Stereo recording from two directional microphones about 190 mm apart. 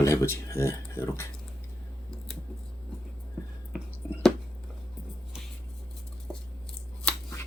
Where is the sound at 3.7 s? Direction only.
5° right (ahead or behind).